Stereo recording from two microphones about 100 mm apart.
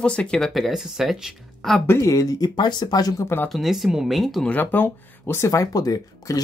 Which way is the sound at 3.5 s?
Centre (ahead or behind).